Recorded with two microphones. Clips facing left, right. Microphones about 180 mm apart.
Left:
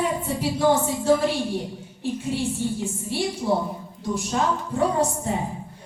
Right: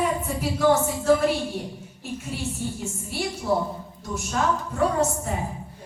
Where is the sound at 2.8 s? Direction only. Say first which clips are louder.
Left 4 dB; 30° left (ahead or behind).